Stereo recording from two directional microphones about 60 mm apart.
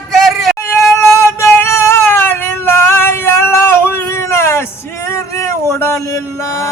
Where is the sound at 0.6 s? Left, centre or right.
Left.